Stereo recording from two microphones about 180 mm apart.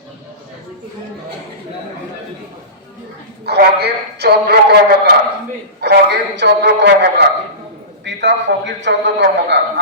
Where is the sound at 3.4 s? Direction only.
65° right (ahead or behind).